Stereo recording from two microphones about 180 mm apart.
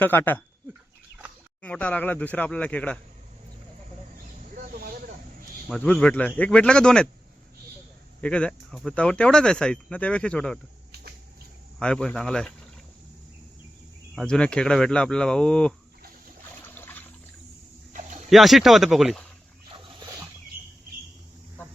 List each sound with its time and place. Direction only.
0.0 s speech: 10° left (ahead or behind)
1.6 s speech: 10° left (ahead or behind)
4.5 s a sound: 55° right (ahead or behind)
5.6 s speech: 5° left (ahead or behind)
8.2 s speech: 5° left (ahead or behind)
11.8 s speech: 5° left (ahead or behind)
14.2 s speech: 5° left (ahead or behind)
16.6 s a sound: 10° left (ahead or behind)
17.9 s a sound: 45° right (ahead or behind)
18.3 s speech: centre (ahead or behind)